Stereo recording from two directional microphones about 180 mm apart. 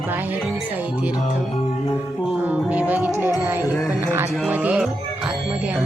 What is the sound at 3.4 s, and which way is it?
Speech, 15° right (ahead or behind).